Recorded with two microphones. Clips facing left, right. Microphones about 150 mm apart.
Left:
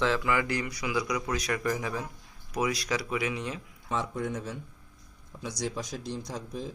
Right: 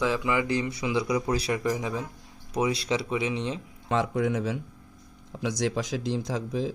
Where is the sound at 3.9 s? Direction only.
90° right.